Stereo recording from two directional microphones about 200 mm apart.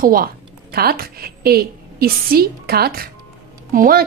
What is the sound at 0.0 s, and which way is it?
A woman's voice, 45° right (ahead or behind).